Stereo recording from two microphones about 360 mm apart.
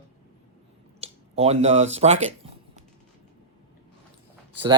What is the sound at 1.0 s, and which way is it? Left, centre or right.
Speech, centre.